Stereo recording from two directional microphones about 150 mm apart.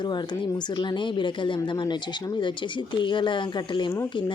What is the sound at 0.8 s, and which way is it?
Speech, 30° left (ahead or behind).